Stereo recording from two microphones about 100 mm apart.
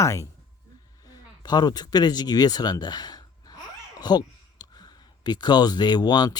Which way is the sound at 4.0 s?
40° left (ahead or behind).